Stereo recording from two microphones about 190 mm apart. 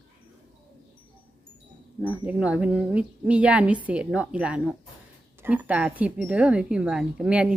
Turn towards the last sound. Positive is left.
turn(degrees=-5)  # may be behind; listen again after turning